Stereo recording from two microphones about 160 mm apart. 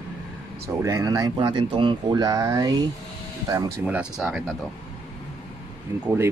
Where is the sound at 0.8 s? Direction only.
20° right (ahead or behind); by 4.6 s 5° right (ahead or behind).